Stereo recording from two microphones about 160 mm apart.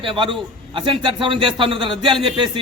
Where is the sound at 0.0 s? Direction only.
30° right (ahead or behind).